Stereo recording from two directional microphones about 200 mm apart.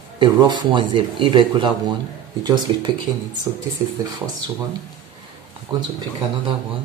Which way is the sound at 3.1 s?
20° right (ahead or behind).